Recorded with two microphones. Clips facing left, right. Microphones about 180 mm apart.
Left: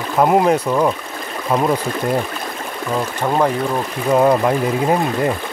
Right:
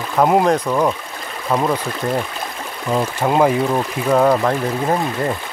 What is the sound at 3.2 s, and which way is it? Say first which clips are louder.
Speech: right 2 dB; 10° right (ahead or behind).